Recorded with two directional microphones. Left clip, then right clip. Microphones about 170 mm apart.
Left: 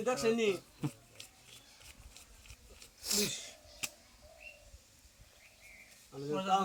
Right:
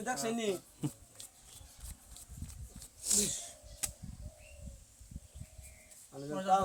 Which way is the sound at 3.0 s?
25° right (ahead or behind).